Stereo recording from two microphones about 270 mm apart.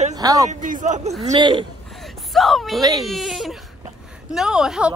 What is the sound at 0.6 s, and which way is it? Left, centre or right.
A man's voice, right.